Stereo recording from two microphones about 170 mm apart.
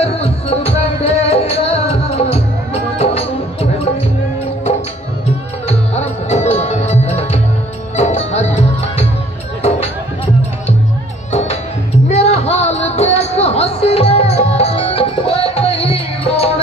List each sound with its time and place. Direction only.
0.0 s music: 35° left (ahead or behind)
5.7 s music: 40° left (ahead or behind)
12.1 s a sound: 40° left (ahead or behind)